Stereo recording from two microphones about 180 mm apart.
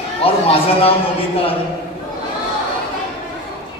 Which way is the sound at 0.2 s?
30° left (ahead or behind).